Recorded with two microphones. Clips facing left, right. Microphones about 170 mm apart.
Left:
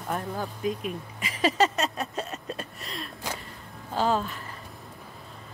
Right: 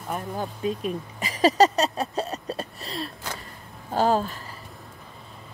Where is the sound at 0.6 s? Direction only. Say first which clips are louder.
Right 4 dB; 30° right (ahead or behind).